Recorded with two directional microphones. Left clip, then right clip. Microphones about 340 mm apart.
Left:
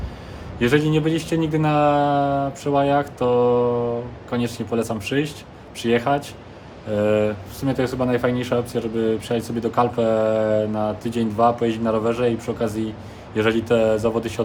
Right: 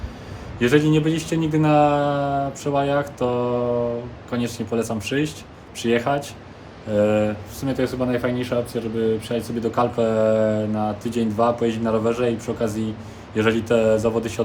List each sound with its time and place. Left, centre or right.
0.6 s speech: centre